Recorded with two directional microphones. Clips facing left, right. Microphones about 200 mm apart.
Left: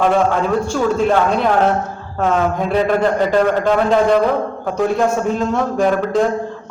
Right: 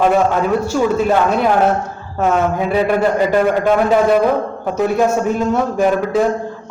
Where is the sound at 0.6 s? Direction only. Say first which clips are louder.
Right 1 dB; 5° right (ahead or behind).